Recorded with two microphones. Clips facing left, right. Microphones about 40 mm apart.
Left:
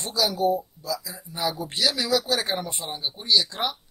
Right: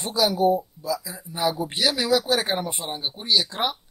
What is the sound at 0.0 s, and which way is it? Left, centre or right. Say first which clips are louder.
Speech: right 3 dB; centre.